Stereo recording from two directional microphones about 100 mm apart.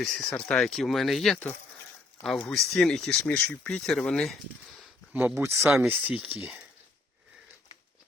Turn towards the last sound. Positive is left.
turn(degrees=-10)  # may be behind; listen again after turning